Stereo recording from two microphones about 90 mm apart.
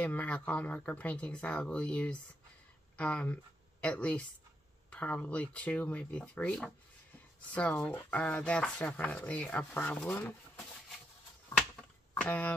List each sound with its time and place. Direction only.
0.0 s speech: 15° left (ahead or behind)
12.2 s speech: 15° left (ahead or behind)